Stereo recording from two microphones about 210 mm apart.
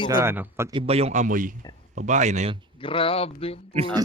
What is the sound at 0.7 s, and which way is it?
Speech, 25° right (ahead or behind).